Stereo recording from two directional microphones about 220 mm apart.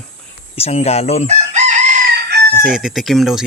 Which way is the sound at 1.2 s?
30° right (ahead or behind).